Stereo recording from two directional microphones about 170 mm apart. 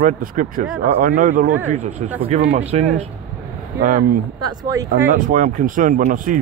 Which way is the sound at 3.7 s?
55° right (ahead or behind).